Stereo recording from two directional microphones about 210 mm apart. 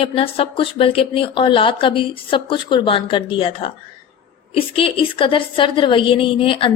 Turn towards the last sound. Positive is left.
turn(degrees=25)  # may be behind; listen again after turning